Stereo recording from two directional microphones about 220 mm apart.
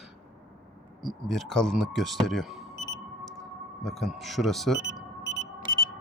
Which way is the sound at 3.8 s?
Centre (ahead or behind).